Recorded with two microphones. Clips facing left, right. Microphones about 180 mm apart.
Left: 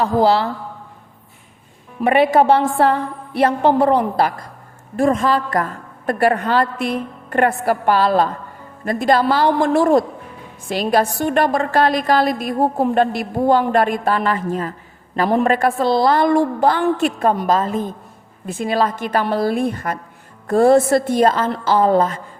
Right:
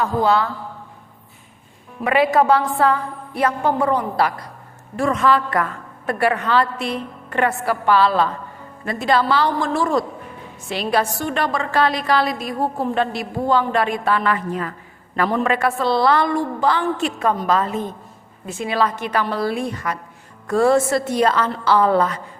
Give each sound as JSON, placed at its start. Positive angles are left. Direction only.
{"t": 2.0, "sound": "a woman's voice", "side_deg": 25}
{"t": 4.2, "sound": "a woman's voice", "side_deg": 45}
{"t": 10.7, "sound": "a woman's voice", "side_deg": 45}
{"t": 14.7, "sound": "a sound", "side_deg": 30}
{"t": 15.3, "sound": "a woman's voice", "side_deg": 50}
{"t": 17.4, "sound": "a woman's voice", "side_deg": 40}